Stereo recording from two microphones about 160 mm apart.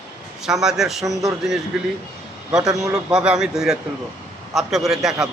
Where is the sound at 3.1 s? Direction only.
5° right (ahead or behind).